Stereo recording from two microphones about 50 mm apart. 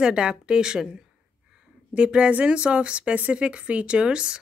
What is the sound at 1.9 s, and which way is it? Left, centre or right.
A woman's voice, centre.